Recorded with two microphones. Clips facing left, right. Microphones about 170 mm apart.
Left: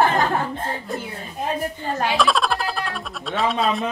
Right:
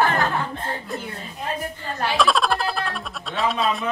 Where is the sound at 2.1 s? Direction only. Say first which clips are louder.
Right 2 dB; centre (ahead or behind).